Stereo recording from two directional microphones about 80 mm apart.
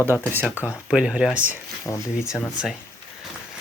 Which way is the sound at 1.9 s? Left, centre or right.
Left.